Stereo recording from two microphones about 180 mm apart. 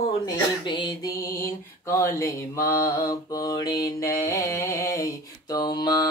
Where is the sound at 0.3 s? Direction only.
25° left (ahead or behind).